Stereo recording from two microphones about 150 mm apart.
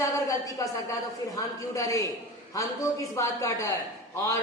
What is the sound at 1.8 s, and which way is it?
A woman's voice, 20° left (ahead or behind).